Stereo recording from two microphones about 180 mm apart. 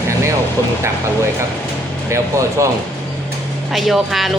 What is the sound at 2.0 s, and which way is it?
Speech, 15° right (ahead or behind).